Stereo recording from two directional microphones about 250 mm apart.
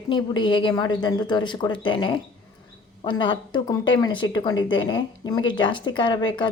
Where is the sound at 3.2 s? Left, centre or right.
Centre.